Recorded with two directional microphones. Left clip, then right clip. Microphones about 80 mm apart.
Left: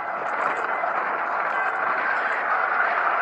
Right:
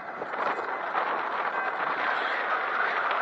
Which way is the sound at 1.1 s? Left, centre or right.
Right.